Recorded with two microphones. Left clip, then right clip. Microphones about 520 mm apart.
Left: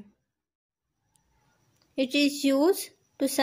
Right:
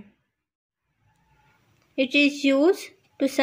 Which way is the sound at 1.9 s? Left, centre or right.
Left.